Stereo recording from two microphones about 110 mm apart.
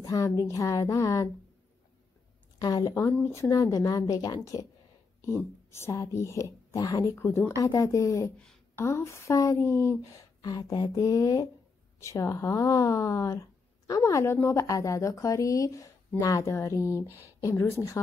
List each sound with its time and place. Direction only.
0.0 s speech: 30° left (ahead or behind)
2.6 s a woman's voice: 35° left (ahead or behind)
2.9 s a woman's voice: 20° left (ahead or behind)
5.7 s a woman's voice: 25° left (ahead or behind)